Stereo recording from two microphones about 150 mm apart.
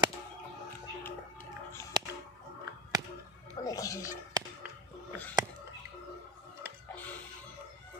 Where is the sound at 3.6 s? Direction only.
25° left (ahead or behind).